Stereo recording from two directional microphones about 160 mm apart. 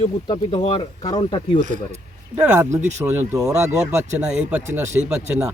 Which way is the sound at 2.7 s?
20° right (ahead or behind).